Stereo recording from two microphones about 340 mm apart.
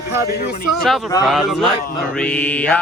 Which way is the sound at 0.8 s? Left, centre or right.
Centre.